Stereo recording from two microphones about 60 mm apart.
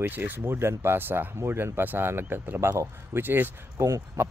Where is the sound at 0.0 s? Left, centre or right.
Right.